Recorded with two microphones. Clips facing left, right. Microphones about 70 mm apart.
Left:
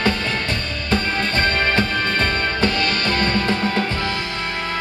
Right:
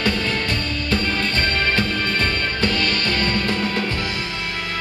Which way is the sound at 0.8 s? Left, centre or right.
Centre.